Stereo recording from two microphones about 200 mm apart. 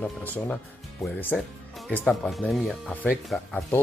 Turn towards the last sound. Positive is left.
turn(degrees=0)  # may be behind; listen again after turning